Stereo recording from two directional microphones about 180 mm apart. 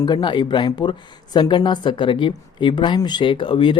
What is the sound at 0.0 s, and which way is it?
Speech, 25° left (ahead or behind).